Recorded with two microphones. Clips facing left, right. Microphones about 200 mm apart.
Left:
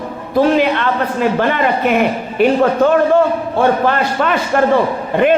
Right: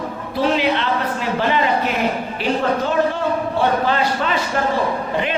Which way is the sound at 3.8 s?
55° left (ahead or behind).